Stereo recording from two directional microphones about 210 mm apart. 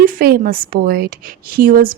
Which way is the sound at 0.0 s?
40° right (ahead or behind).